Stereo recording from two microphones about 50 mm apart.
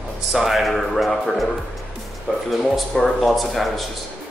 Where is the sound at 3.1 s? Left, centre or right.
Centre.